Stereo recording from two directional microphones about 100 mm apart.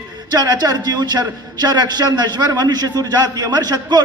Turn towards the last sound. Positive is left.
turn(degrees=-40)  # may be behind; listen again after turning